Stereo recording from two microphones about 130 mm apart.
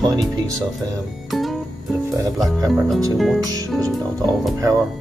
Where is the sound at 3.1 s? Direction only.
Centre (ahead or behind).